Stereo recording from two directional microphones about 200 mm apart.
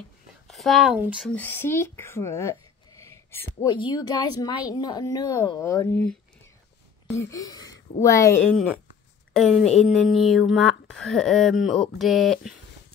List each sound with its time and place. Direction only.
0.5 s a child's voice: centre (ahead or behind)
9.3 s speech: centre (ahead or behind)